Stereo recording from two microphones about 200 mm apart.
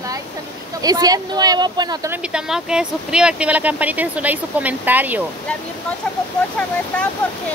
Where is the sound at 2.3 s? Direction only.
5° right (ahead or behind).